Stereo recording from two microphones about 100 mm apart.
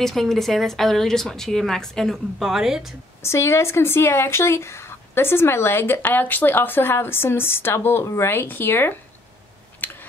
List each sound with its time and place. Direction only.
0.0 s a woman's voice: centre (ahead or behind)
3.2 s speech: 25° left (ahead or behind)
9.8 s a sound: 20° left (ahead or behind)